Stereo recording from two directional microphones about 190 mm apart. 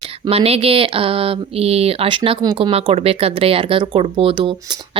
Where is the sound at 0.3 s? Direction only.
30° right (ahead or behind).